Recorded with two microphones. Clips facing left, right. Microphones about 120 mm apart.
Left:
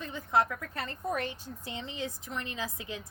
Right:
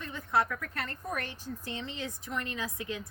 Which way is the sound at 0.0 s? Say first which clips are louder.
Left 1 dB; 20° left (ahead or behind).